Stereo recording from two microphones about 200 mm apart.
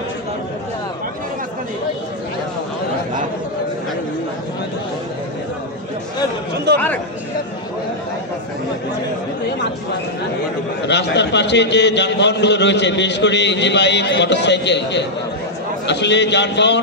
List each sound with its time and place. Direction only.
6.7 s speech: 55° right (ahead or behind)
10.9 s a man's voice: 60° left (ahead or behind)